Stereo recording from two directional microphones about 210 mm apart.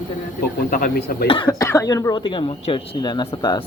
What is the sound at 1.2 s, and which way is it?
Speech, 25° left (ahead or behind).